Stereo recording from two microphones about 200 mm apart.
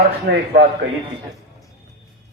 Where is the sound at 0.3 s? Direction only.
65° right (ahead or behind).